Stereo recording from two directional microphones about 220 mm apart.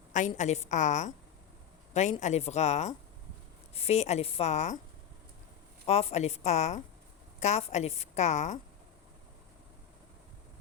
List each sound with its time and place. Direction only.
0.1 s a woman's voice: 35° left (ahead or behind)
5.8 s a woman's voice: 30° left (ahead or behind)